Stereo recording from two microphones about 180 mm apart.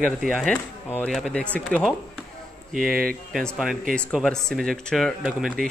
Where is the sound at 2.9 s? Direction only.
55° right (ahead or behind).